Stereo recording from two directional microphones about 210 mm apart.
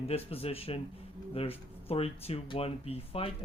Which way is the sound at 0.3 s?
30° left (ahead or behind).